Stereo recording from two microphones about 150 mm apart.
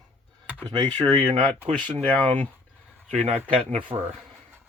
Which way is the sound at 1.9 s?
10° left (ahead or behind).